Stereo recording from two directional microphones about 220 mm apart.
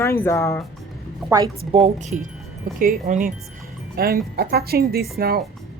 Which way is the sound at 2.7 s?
40° right (ahead or behind).